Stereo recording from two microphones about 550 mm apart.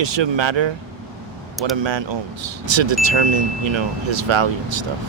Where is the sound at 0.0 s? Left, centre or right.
Right.